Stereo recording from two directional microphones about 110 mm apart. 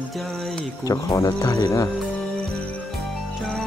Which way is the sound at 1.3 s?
40° left (ahead or behind).